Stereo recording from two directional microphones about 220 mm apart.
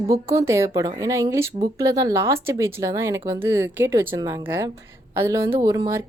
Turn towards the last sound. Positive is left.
turn(degrees=-15)  # may be behind; listen again after turning